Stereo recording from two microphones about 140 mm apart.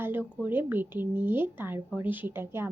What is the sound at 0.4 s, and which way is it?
Speech, 15° right (ahead or behind).